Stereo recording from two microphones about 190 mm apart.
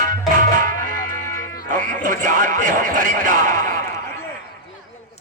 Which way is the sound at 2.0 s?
45° right (ahead or behind).